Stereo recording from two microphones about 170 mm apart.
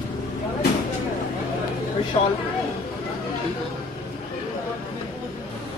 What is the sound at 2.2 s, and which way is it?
Speech, 25° left (ahead or behind).